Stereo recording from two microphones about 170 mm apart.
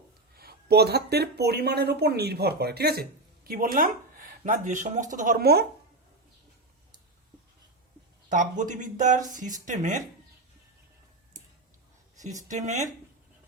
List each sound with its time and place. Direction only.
0.3 s speech: 65° right (ahead or behind)
8.3 s speech: 50° right (ahead or behind)
12.2 s speech: 45° right (ahead or behind)